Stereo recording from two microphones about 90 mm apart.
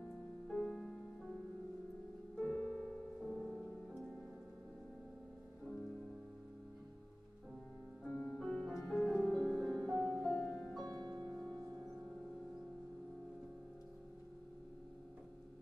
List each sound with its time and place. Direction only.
0.5 s music: 5° left (ahead or behind)
2.3 s music: 10° left (ahead or behind)
3.3 s music: 5° right (ahead or behind)
8.0 s music: 15° left (ahead or behind)
10.9 s music: 50° right (ahead or behind)
11.2 s music: 5° left (ahead or behind)